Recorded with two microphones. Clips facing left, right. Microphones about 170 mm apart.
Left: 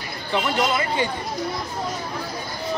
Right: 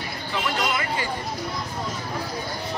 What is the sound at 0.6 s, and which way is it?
Speech, 25° left (ahead or behind).